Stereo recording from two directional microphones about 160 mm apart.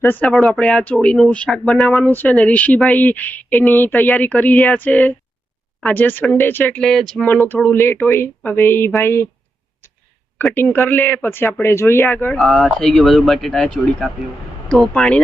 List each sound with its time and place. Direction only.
0.0 s speech: 10° left (ahead or behind)
9.8 s a sound: 15° left (ahead or behind)
10.3 s speech: 10° left (ahead or behind)
12.4 s speech: centre (ahead or behind)